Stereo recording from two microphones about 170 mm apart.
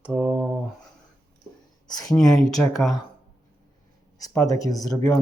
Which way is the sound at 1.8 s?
25° left (ahead or behind).